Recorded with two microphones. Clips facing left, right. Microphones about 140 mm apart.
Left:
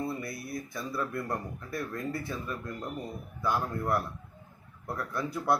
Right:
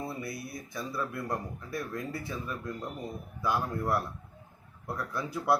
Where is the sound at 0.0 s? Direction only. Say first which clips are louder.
Left 2 dB; 5° right (ahead or behind).